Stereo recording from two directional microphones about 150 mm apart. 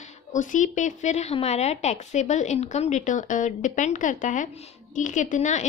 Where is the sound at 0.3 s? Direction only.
60° left (ahead or behind).